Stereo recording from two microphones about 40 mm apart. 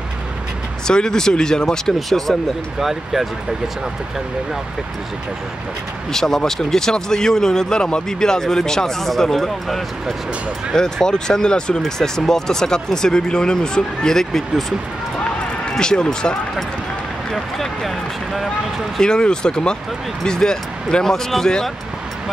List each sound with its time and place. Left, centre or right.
0.8 s speech: centre
2.0 s speech: centre
6.1 s speech: centre
10.8 s speech: centre
11.8 s speech: centre
15.8 s speech: centre
17.3 s speech: centre
18.9 s speech: left